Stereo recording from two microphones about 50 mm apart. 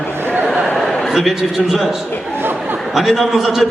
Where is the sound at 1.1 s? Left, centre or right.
Centre.